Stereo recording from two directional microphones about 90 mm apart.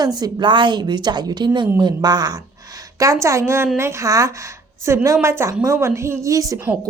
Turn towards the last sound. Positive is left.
turn(degrees=-40)  # may be behind; listen again after turning